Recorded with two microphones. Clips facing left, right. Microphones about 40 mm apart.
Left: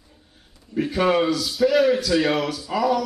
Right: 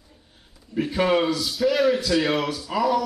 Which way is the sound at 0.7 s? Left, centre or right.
Centre.